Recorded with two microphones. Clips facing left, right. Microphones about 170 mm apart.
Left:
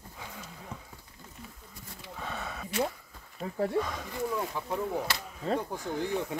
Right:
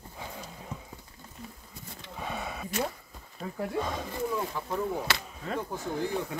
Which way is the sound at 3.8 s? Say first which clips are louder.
Right 4 dB; 30° right (ahead or behind).